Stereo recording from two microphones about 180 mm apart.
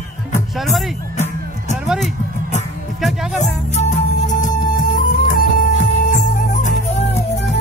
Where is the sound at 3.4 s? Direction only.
40° left (ahead or behind).